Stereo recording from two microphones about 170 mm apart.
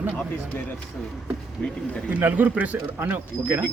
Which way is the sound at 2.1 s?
10° right (ahead or behind).